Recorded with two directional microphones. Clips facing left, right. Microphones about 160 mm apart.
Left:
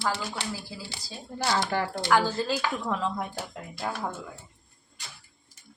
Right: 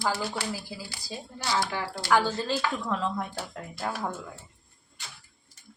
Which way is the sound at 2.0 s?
Centre (ahead or behind).